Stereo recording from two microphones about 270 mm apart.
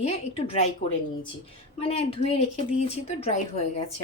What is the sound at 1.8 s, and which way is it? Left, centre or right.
A woman's voice, left.